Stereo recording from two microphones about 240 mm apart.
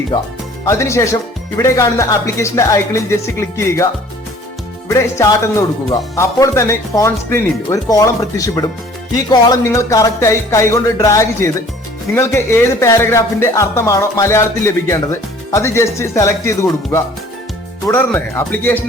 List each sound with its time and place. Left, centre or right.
0.1 s speech: centre
4.9 s speech: centre